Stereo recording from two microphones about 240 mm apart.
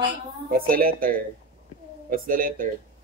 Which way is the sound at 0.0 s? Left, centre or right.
Right.